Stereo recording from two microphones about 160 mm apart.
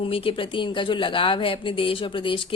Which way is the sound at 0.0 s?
35° left (ahead or behind).